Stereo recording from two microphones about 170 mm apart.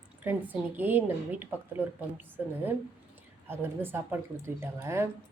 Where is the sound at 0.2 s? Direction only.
10° right (ahead or behind).